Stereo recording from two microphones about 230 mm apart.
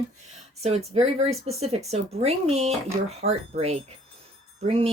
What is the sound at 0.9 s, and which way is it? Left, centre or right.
Speech, right.